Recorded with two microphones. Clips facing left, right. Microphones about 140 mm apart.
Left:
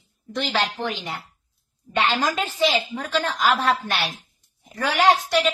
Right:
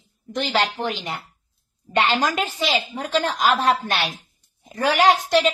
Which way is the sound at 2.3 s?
15° right (ahead or behind).